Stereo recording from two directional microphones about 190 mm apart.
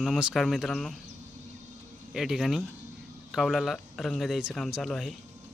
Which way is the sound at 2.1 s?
Centre (ahead or behind).